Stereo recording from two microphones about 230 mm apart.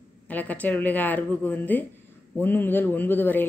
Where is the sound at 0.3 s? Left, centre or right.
Centre.